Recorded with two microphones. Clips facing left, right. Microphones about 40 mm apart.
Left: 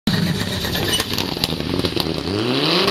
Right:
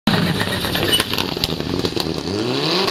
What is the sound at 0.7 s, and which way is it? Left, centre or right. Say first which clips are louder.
Vehicle: right 3 dB; centre.